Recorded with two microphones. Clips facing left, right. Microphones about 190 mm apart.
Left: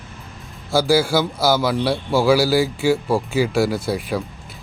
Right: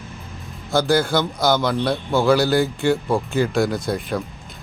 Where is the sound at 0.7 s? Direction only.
5° left (ahead or behind).